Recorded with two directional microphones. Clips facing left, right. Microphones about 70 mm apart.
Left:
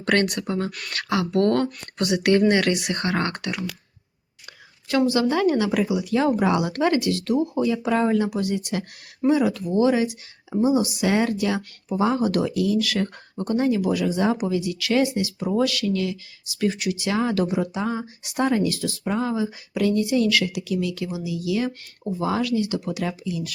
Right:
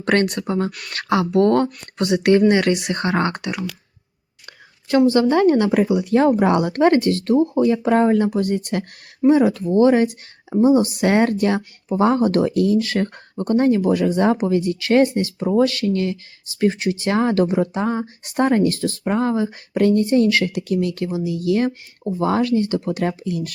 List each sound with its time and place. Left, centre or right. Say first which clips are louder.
0.0 s speech: right 3 dB; right
0.7 s speech: even; centre
0.9 s speech: right 5 dB; right
4.9 s speech: right 5 dB; right
9.3 s speech: right 5 dB; right